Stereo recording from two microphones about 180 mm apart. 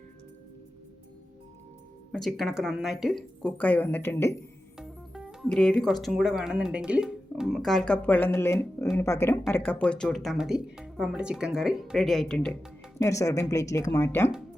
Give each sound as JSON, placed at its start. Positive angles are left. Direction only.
{"t": 2.1, "sound": "speech", "side_deg": 0}
{"t": 4.8, "sound": "speech", "side_deg": 0}
{"t": 8.8, "sound": "a sound", "side_deg": 10}
{"t": 9.6, "sound": "speech", "side_deg": 5}
{"t": 13.0, "sound": "speech", "side_deg": 15}